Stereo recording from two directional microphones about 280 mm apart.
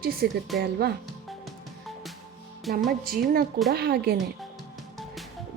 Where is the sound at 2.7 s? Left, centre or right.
Right.